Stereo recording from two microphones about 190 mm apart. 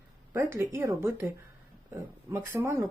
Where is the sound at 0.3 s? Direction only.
15° right (ahead or behind).